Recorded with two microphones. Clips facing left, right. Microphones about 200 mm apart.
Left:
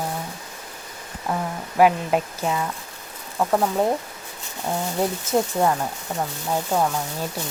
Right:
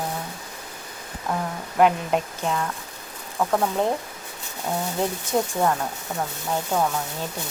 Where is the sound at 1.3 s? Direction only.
5° left (ahead or behind).